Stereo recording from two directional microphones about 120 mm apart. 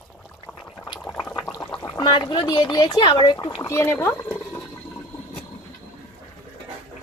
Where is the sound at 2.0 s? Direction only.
40° left (ahead or behind).